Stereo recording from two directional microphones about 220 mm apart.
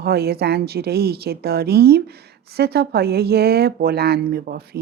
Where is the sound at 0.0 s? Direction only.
45° right (ahead or behind).